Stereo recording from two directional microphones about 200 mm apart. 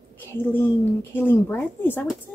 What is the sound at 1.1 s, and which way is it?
Speech, 10° left (ahead or behind).